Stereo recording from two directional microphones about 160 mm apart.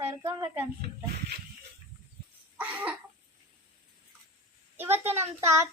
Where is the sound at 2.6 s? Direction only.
10° right (ahead or behind).